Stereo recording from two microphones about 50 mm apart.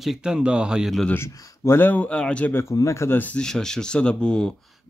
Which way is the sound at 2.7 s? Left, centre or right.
Left.